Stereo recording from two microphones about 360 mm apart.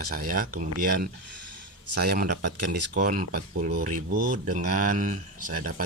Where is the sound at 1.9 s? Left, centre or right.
Right.